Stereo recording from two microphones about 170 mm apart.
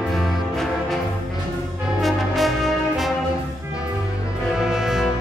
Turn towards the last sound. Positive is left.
turn(degrees=-5)  # may be behind; listen again after turning